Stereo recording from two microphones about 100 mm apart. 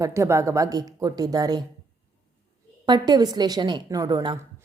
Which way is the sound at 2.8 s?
45° right (ahead or behind).